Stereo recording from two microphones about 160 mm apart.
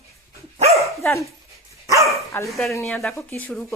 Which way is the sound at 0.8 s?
20° left (ahead or behind).